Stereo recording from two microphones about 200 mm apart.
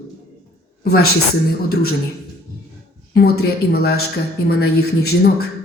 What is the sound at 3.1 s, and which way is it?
Speech, 50° left (ahead or behind).